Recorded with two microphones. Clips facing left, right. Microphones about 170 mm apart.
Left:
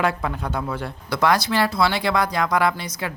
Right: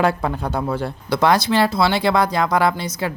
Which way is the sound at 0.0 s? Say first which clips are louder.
Right 4 dB; 35° right (ahead or behind).